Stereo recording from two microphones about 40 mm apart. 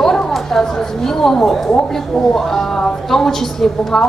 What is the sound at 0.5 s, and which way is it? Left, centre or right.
A woman's voice, centre.